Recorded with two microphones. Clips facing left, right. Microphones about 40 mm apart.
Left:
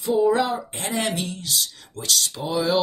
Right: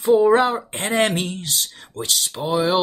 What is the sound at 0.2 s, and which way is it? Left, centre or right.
Speech, right.